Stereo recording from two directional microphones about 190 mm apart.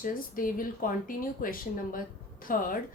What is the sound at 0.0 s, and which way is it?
A woman's voice, 45° left (ahead or behind).